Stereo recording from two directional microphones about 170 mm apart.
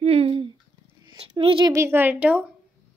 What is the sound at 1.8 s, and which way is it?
Speech, 15° right (ahead or behind).